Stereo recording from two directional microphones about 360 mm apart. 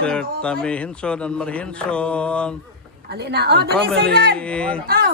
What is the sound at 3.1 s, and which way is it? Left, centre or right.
A woman's voice, right.